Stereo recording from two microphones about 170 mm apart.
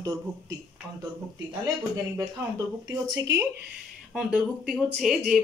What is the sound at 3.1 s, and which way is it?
Speech, 20° right (ahead or behind).